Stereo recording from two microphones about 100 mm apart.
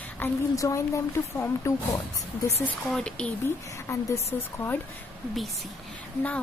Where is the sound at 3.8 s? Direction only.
30° left (ahead or behind).